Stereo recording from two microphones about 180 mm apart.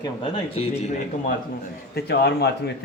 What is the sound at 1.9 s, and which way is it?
Speech, 65° left (ahead or behind).